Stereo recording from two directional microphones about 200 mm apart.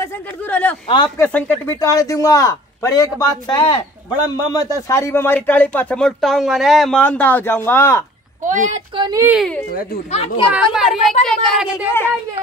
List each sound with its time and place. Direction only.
0.0 s speech: 10° left (ahead or behind)
0.8 s speech: 20° left (ahead or behind)
8.4 s a woman's voice: 40° right (ahead or behind)
8.9 s a child's voice: 20° right (ahead or behind)
9.3 s speech: centre (ahead or behind)
10.1 s speech: 30° left (ahead or behind)
10.5 s speech: 5° right (ahead or behind)